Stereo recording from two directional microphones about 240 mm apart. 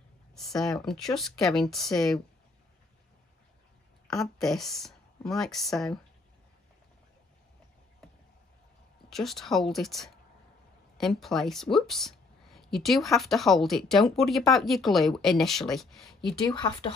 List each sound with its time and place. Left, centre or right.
0.6 s speech: centre
4.1 s speech: centre
9.1 s speech: centre
16.3 s speech: centre